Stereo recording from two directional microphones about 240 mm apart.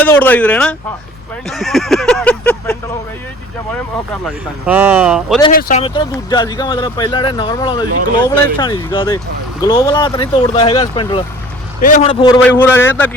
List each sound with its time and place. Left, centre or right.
0.0 s speech: centre
4.6 s speech: centre
5.5 s speech: left
5.8 s speech: left
11.8 s speech: left
12.4 s speech: centre